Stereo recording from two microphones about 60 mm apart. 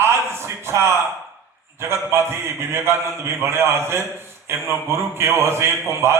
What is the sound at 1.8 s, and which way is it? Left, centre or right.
A man's voice, right.